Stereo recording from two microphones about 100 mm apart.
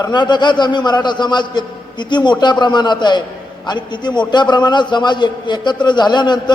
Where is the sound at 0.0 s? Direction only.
45° left (ahead or behind).